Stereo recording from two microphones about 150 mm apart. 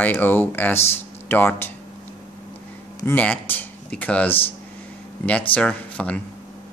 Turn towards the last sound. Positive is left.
turn(degrees=10)  # may be behind; listen again after turning